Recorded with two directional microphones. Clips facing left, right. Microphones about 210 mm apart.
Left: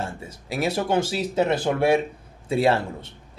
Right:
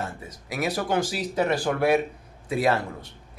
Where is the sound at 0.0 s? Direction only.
30° left (ahead or behind).